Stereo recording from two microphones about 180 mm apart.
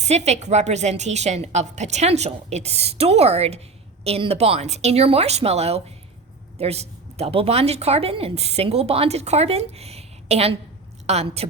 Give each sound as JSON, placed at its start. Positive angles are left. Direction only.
{"t": 0.0, "sound": "a woman's voice", "side_deg": -40}